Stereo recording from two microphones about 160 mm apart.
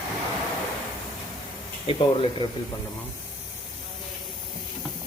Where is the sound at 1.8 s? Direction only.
35° left (ahead or behind).